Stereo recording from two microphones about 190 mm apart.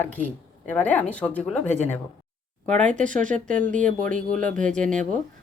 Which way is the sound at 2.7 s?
40° right (ahead or behind).